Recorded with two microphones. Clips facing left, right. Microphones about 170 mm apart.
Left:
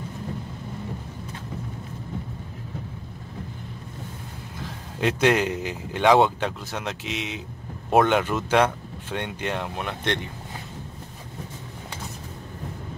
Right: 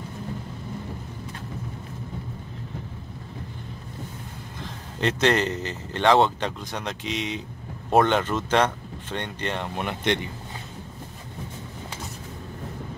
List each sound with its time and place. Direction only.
4.6 s speech: 5° left (ahead or behind)